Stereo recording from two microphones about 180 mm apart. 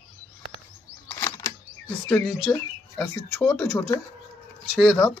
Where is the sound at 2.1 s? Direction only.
Centre (ahead or behind).